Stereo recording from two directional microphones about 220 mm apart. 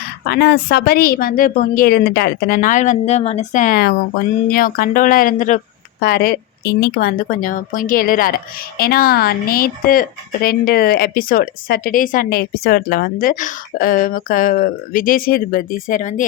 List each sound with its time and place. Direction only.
0.3 s a woman's voice: 50° left (ahead or behind)